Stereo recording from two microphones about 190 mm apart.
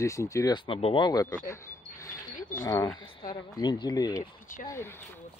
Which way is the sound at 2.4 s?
45° left (ahead or behind).